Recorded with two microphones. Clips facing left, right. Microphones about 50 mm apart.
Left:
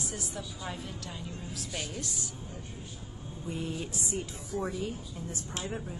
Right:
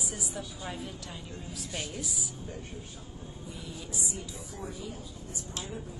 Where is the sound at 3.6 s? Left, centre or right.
Left.